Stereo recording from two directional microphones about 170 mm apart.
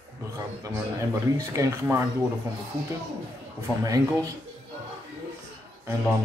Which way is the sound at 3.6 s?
20° right (ahead or behind).